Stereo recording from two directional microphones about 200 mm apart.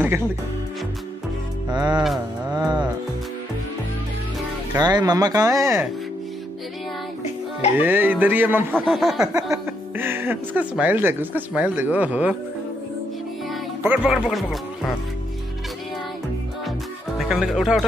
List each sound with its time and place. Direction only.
1.7 s speech: 20° right (ahead or behind)
4.7 s speech: 20° right (ahead or behind)
7.8 s speech: 10° right (ahead or behind)
8.7 s speech: centre (ahead or behind)
9.5 s speech: 10° right (ahead or behind)
13.5 s speech: 5° right (ahead or behind)
17.2 s speech: centre (ahead or behind)